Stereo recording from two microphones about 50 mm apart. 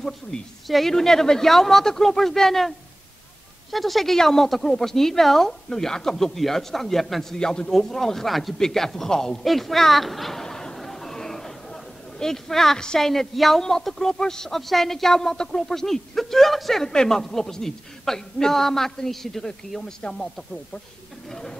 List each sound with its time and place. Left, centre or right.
0.3 s a man's voice: centre
0.7 s a man's voice: centre
3.7 s a man's voice: centre
7.3 s a man's voice: centre
10.4 s chatter: centre
14.1 s a man's voice: centre
21.3 s a man's voice: centre